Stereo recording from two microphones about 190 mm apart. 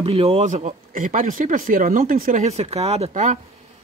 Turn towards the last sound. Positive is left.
turn(degrees=-35)  # may be behind; listen again after turning